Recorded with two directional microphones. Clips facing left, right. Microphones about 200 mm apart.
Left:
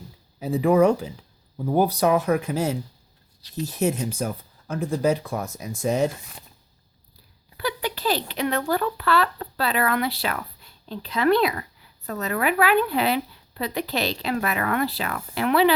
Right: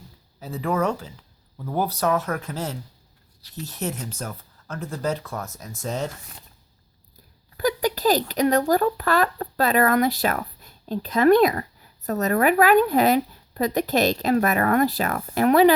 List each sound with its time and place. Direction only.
0.3 s speech: 15° left (ahead or behind)
7.5 s speech: 40° right (ahead or behind)